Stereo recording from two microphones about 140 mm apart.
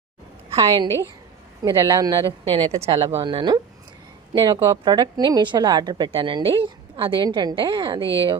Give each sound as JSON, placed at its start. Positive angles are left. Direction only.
{"t": 0.5, "sound": "a woman's voice", "side_deg": -25}
{"t": 2.2, "sound": "a woman's voice", "side_deg": -40}